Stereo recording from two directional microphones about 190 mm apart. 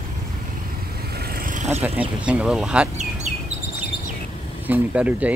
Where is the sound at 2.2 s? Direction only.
5° right (ahead or behind).